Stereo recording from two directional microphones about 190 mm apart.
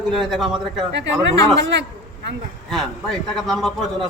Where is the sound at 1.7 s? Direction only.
65° right (ahead or behind).